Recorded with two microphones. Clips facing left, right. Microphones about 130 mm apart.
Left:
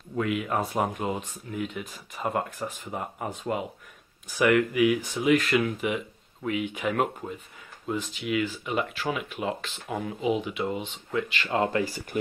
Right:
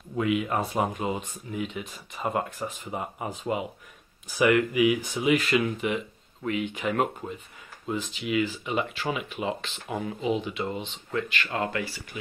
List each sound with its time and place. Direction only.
0.1 s speech: 5° right (ahead or behind)
11.4 s speech: 25° left (ahead or behind)
11.8 s speech: 45° left (ahead or behind)